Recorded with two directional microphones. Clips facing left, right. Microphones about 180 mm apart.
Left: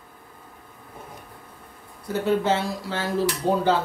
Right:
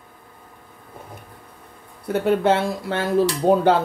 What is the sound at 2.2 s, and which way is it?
Speech, 60° right (ahead or behind).